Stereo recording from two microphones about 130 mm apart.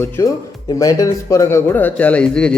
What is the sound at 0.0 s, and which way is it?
Speech, 25° left (ahead or behind).